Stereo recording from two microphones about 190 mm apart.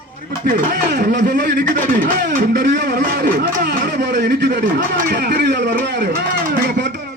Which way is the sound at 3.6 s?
60° right (ahead or behind).